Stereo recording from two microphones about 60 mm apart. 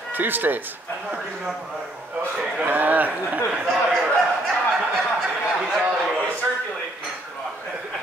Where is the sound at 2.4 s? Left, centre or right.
Right.